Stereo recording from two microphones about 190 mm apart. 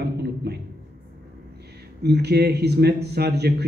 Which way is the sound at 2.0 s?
60° right (ahead or behind).